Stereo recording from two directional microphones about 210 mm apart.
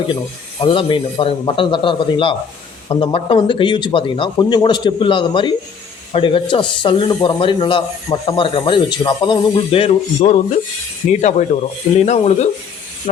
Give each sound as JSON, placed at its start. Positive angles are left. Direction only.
{"t": 0.6, "sound": "speech", "side_deg": 25}